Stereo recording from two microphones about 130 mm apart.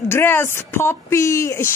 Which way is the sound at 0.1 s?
15° left (ahead or behind).